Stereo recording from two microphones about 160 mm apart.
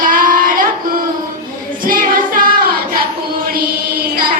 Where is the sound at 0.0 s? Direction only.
60° right (ahead or behind).